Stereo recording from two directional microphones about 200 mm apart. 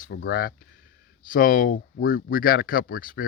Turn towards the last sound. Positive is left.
turn(degrees=45)  # may be behind; listen again after turning